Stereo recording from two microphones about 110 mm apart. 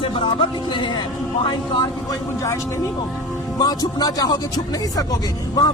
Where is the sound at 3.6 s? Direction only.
35° left (ahead or behind).